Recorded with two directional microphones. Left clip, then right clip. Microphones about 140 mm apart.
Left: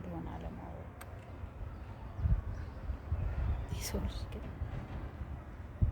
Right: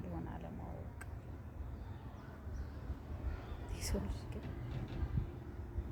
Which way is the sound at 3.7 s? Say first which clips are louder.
Left 1 dB; 15° left (ahead or behind).